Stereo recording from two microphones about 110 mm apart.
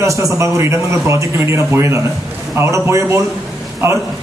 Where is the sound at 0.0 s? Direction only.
30° right (ahead or behind).